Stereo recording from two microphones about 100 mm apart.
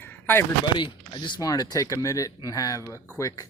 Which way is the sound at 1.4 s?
40° left (ahead or behind).